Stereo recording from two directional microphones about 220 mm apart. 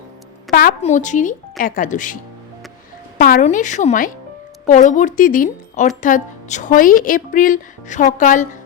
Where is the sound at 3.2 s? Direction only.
35° left (ahead or behind).